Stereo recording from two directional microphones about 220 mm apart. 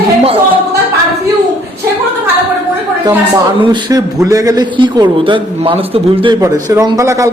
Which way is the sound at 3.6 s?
20° right (ahead or behind).